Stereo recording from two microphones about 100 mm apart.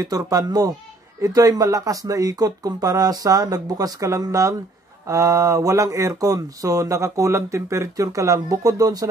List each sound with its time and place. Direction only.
0.0 s speech: 35° right (ahead or behind)